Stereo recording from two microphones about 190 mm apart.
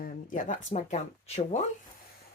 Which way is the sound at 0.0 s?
45° left (ahead or behind).